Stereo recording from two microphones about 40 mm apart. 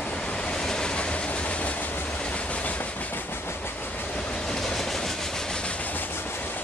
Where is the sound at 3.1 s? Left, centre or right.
Left.